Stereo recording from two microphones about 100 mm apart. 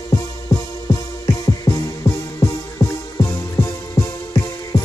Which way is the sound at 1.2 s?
35° left (ahead or behind).